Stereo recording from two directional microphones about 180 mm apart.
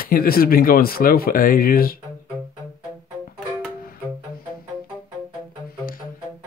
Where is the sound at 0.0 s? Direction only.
55° left (ahead or behind).